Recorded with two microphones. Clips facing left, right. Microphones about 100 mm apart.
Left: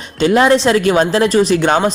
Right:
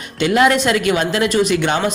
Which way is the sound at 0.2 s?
30° left (ahead or behind).